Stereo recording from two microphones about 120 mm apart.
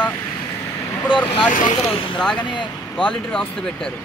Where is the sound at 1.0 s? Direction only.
40° left (ahead or behind).